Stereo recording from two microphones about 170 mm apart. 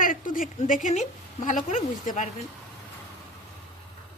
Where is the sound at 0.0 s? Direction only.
50° left (ahead or behind).